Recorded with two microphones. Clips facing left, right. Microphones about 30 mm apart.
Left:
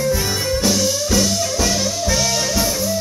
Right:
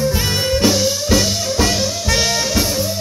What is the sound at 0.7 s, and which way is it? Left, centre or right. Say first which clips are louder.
Music: right 1 dB; right.